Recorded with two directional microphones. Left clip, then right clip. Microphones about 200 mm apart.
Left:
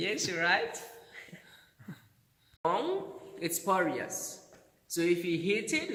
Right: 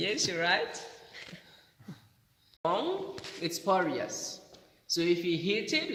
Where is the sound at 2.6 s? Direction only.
45° right (ahead or behind).